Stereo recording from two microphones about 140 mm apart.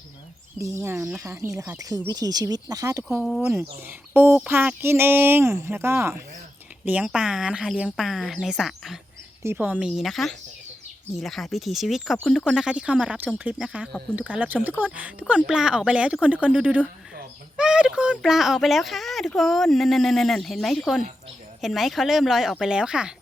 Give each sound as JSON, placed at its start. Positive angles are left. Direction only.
{"t": 0.6, "sound": "speech", "side_deg": -20}
{"t": 3.2, "sound": "speech", "side_deg": 0}
{"t": 3.5, "sound": "speech", "side_deg": -15}
{"t": 9.4, "sound": "speech", "side_deg": -15}
{"t": 9.8, "sound": "speech", "side_deg": 0}